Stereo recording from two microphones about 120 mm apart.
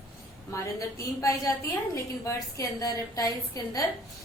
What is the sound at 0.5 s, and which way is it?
A woman's voice, 25° left (ahead or behind).